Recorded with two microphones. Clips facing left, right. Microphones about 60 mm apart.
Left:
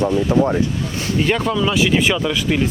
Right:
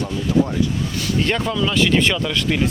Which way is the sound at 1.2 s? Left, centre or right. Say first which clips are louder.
Left 3 dB; centre.